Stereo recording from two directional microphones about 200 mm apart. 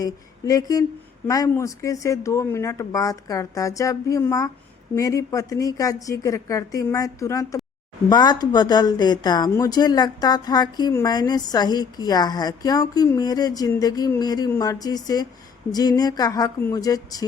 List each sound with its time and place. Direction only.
0.0 s a woman's voice: 15° left (ahead or behind)